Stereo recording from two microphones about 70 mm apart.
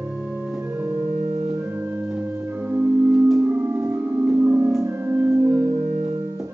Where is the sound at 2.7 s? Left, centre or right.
Right.